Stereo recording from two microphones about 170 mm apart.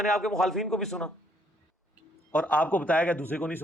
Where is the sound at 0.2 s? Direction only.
Centre (ahead or behind).